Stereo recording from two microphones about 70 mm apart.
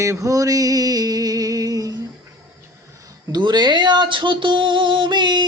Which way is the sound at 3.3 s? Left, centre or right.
Right.